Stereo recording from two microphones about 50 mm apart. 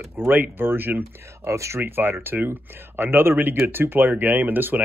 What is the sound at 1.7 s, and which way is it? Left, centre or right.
Speech, right.